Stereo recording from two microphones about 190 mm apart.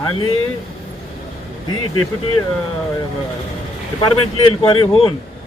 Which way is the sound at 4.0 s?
25° left (ahead or behind).